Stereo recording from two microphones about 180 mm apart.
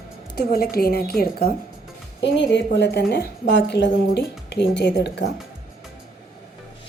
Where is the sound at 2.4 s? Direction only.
75° left (ahead or behind).